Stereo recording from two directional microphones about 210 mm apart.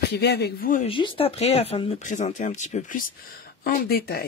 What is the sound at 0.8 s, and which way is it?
Speech, 25° left (ahead or behind).